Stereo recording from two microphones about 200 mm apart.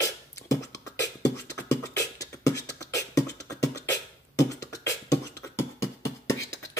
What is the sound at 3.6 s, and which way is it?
Beatboxing, 15° left (ahead or behind).